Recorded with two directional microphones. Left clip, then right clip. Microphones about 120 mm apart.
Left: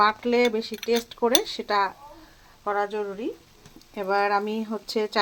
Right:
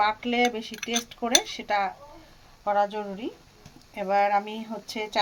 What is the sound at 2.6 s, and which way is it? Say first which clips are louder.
Speech: right 1 dB; 35° left (ahead or behind).